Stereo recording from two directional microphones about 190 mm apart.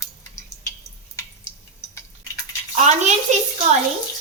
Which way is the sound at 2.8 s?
40° right (ahead or behind).